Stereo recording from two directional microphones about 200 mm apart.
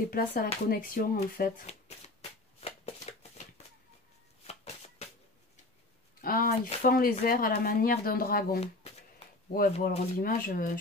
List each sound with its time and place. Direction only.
0.1 s speech: 45° left (ahead or behind)
2.6 s shuffling cards: 30° left (ahead or behind)
4.5 s shuffling cards: 30° left (ahead or behind)
6.2 s speech: 45° left (ahead or behind)